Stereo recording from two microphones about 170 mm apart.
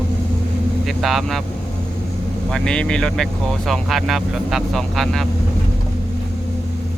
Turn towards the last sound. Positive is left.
turn(degrees=0)  # may be behind; listen again after turning